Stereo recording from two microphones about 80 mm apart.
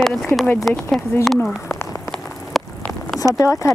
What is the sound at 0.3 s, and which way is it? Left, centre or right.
Speech, left.